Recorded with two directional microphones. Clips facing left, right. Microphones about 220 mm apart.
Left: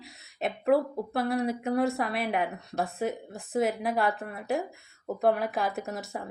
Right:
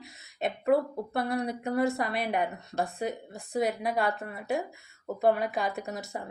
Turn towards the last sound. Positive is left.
turn(degrees=0)  # may be behind; listen again after turning